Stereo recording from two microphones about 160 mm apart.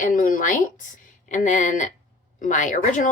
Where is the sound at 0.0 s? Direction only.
60° left (ahead or behind).